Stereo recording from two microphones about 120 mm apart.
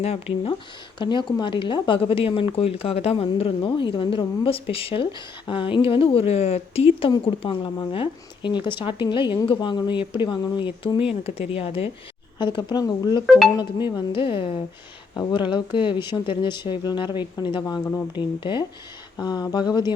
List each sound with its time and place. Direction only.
0.0 s speech: 55° left (ahead or behind)
0.9 s speech: 40° left (ahead or behind); by 7.1 s 60° left (ahead or behind)
7.1 s speech: 40° left (ahead or behind)
11.1 s speech: 55° left (ahead or behind)
12.4 s speech: 40° left (ahead or behind)